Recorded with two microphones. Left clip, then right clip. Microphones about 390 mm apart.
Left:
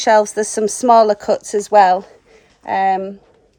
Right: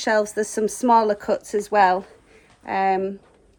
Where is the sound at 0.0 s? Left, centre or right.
Left.